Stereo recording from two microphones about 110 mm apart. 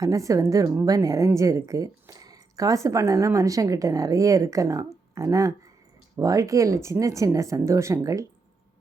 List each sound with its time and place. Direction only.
0.0 s speech: 30° right (ahead or behind)